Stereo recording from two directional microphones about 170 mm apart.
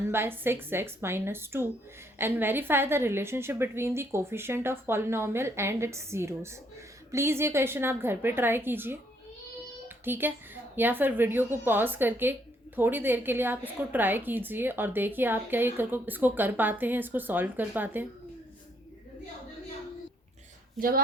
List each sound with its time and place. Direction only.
0.1 s a woman's voice: 15° right (ahead or behind)
10.0 s a woman's voice: 10° right (ahead or behind)
20.7 s a woman's voice: 60° right (ahead or behind)